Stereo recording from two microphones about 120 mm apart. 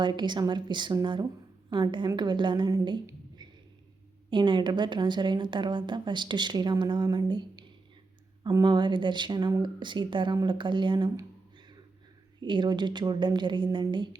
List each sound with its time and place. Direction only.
0.0 s speech: 40° right (ahead or behind)
3.1 s a sound: 35° right (ahead or behind)
4.3 s speech: 40° right (ahead or behind)
12.4 s speech: 40° right (ahead or behind)